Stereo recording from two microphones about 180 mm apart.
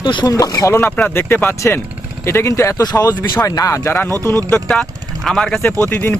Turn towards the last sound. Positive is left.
turn(degrees=10)  # may be behind; listen again after turning